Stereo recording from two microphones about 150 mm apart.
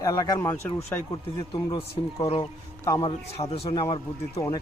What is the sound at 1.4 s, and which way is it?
A man's voice, 30° left (ahead or behind).